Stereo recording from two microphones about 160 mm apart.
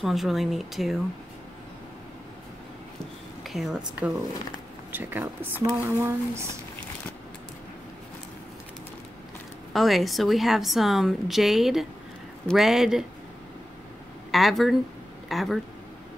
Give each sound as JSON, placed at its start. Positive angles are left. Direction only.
{"t": 0.0, "sound": "a woman's voice", "side_deg": 0}
{"t": 3.4, "sound": "a woman's voice", "side_deg": 0}
{"t": 9.7, "sound": "a woman's voice", "side_deg": 0}
{"t": 14.3, "sound": "a woman's voice", "side_deg": 0}